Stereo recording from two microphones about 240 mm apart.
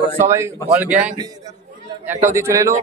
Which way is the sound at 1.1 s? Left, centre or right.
Centre.